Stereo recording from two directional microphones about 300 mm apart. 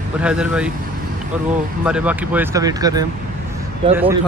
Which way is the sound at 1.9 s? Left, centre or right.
Centre.